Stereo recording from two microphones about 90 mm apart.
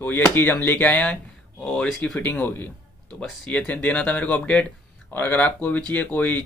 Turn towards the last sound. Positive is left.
turn(degrees=15)  # may be behind; listen again after turning